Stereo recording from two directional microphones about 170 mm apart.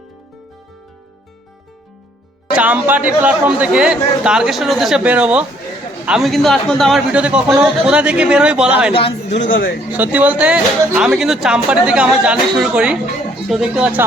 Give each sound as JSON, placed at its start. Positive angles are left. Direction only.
{"t": 2.5, "sound": "a man's voice", "side_deg": -10}
{"t": 8.9, "sound": "a man's voice", "side_deg": 35}
{"t": 9.5, "sound": "speech", "side_deg": 60}
{"t": 9.9, "sound": "a man's voice", "side_deg": -10}